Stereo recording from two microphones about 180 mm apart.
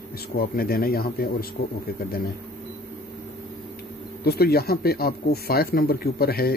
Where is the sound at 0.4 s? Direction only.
55° left (ahead or behind).